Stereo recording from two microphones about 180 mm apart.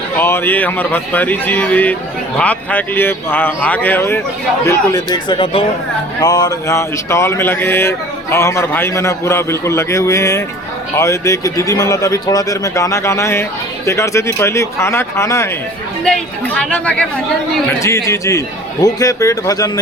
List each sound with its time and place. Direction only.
0.2 s speech: 10° left (ahead or behind)
16.0 s speech: 5° left (ahead or behind); by 19.8 s 20° left (ahead or behind)